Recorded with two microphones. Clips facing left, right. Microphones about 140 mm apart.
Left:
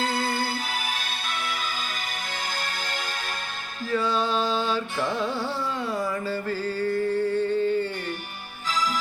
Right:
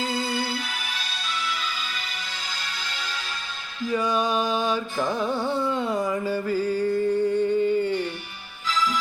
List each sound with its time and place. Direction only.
0.0 s music: 60° left (ahead or behind)
3.8 s music: 15° right (ahead or behind)
5.4 s a sound: 20° right (ahead or behind)